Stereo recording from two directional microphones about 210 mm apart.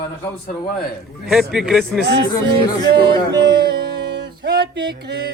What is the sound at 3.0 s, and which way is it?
Speech, 20° right (ahead or behind).